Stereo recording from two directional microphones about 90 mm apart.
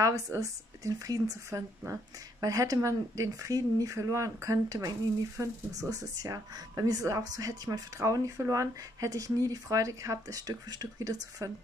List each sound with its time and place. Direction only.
0.0 s speech: 40° right (ahead or behind)